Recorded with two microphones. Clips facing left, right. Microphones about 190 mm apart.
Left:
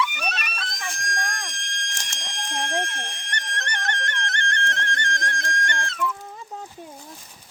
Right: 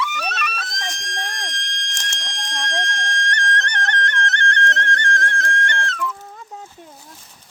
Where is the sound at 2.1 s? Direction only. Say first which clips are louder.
Left 3 dB; 10° left (ahead or behind).